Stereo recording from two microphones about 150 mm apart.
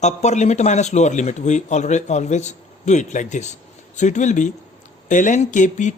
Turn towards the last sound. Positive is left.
turn(degrees=55)  # may be behind; listen again after turning